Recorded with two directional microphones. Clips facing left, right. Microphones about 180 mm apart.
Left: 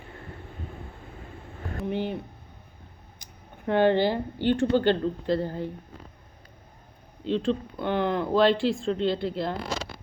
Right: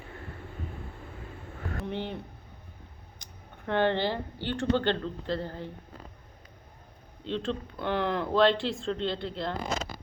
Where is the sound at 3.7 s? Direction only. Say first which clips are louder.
Left 5 dB; 10° left (ahead or behind).